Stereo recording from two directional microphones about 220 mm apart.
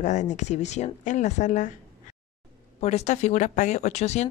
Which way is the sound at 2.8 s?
30° left (ahead or behind).